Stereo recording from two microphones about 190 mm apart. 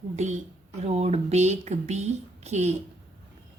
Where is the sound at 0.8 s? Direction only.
35° right (ahead or behind).